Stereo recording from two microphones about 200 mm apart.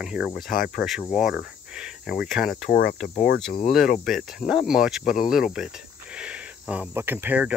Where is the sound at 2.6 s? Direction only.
50° left (ahead or behind).